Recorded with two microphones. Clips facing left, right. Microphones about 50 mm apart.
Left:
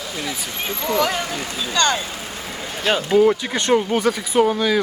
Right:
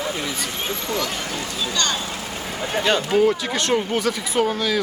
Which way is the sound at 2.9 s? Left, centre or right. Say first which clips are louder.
Left 3 dB; centre.